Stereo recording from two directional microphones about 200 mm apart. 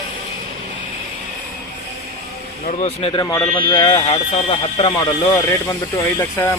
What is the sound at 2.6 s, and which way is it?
Speech, 35° left (ahead or behind).